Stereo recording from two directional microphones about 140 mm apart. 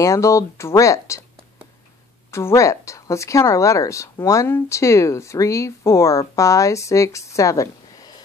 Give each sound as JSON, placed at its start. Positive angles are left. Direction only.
{"t": 0.0, "sound": "speech", "side_deg": 20}
{"t": 2.3, "sound": "speech", "side_deg": 20}